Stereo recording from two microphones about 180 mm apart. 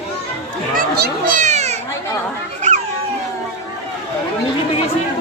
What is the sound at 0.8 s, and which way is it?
Speech, 55° right (ahead or behind).